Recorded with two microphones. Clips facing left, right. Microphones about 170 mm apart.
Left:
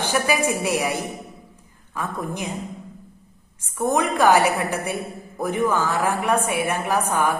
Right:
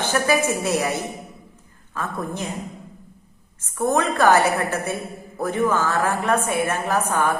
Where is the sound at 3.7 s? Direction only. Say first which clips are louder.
Even; 15° left (ahead or behind).